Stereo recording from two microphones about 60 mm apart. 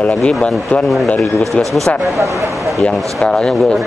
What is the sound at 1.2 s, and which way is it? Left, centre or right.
Speech, centre.